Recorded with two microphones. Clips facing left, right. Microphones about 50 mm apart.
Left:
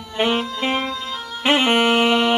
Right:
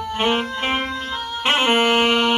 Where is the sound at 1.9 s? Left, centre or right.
Right.